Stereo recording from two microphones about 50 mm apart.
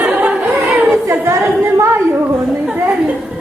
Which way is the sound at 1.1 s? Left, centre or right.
Right.